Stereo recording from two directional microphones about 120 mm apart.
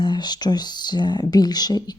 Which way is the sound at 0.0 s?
35° left (ahead or behind).